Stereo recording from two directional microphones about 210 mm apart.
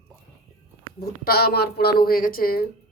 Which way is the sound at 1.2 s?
50° left (ahead or behind).